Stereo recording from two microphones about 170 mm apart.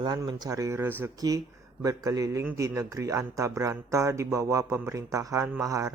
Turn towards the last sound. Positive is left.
turn(degrees=-20)  # may be behind; listen again after turning